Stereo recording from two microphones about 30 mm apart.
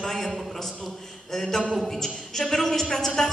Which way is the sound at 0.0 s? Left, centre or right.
Centre.